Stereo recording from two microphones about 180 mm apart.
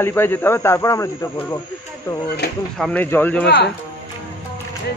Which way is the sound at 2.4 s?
65° left (ahead or behind).